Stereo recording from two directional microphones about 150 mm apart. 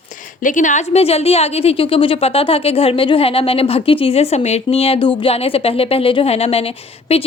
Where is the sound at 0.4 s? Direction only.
55° left (ahead or behind).